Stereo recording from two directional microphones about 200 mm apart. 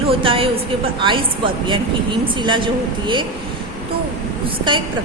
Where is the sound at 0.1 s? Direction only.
25° right (ahead or behind).